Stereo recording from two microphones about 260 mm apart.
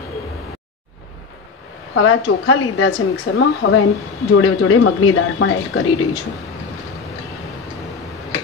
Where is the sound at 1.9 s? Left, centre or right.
Left.